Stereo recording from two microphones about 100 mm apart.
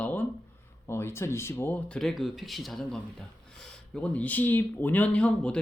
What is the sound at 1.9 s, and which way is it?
Speech, 5° left (ahead or behind).